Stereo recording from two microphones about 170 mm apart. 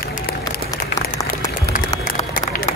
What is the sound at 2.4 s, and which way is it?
Run, 55° left (ahead or behind).